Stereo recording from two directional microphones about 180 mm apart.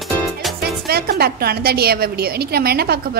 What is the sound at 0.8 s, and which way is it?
A woman's voice, 60° right (ahead or behind).